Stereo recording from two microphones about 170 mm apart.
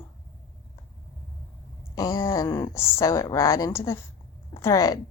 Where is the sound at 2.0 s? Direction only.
20° left (ahead or behind).